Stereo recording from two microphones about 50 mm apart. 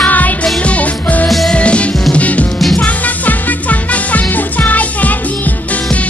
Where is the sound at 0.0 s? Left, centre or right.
Left.